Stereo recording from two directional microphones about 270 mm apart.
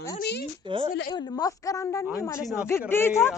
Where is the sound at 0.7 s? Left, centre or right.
Centre.